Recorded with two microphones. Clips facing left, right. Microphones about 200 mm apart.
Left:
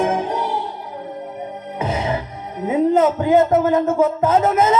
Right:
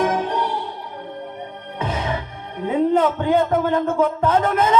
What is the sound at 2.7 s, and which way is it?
A man's voice, 5° left (ahead or behind).